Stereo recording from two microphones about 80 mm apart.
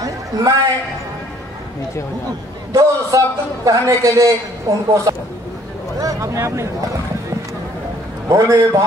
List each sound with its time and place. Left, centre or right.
0.0 s a sound: right
2.7 s a man's voice: right
8.3 s a man's voice: right